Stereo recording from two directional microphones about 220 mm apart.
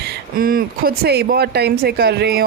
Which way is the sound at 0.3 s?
40° right (ahead or behind).